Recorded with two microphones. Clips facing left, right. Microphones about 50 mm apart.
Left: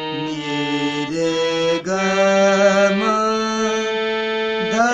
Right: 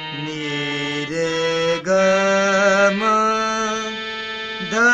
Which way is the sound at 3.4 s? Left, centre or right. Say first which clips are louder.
Left 1 dB; centre.